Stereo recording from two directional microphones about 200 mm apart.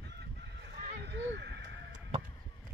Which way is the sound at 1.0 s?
60° right (ahead or behind).